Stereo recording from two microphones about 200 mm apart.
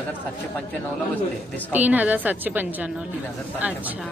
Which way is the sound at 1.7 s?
10° right (ahead or behind).